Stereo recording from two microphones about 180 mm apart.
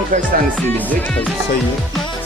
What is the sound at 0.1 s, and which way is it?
Speech, 45° right (ahead or behind).